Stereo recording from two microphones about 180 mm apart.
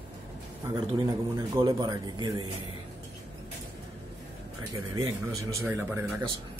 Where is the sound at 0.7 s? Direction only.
20° right (ahead or behind).